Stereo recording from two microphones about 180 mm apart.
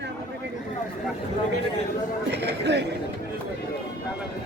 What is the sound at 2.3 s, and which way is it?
Speech, 70° right (ahead or behind).